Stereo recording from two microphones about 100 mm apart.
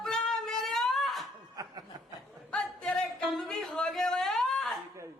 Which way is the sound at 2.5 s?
5° left (ahead or behind).